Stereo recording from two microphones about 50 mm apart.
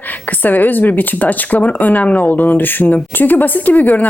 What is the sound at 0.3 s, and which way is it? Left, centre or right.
Speech, left.